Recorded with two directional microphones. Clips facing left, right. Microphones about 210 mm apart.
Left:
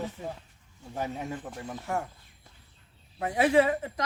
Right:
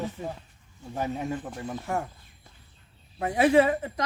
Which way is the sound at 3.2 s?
30° right (ahead or behind).